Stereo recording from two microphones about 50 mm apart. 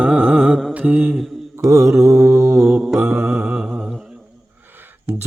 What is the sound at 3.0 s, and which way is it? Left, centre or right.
Music, right.